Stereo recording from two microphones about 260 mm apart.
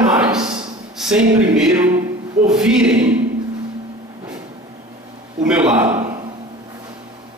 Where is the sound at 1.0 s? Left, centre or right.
Centre.